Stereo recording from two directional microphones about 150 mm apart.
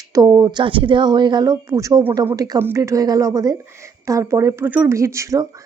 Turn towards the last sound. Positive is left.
turn(degrees=-20)  # may be behind; listen again after turning